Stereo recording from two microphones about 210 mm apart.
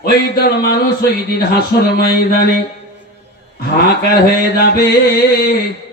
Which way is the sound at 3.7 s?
50° left (ahead or behind).